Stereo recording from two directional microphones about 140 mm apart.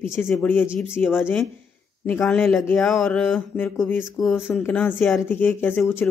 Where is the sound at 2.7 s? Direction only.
5° left (ahead or behind).